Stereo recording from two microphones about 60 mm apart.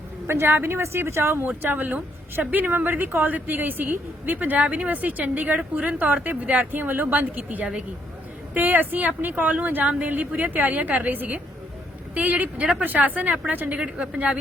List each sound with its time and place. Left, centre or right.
0.3 s a woman's voice: right
0.8 s a woman's voice: right
1.5 s a woman's voice: right